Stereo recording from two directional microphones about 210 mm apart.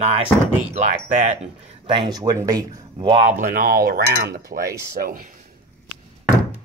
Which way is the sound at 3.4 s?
40° right (ahead or behind).